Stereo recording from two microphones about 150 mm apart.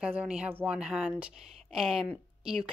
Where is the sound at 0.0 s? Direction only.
10° right (ahead or behind).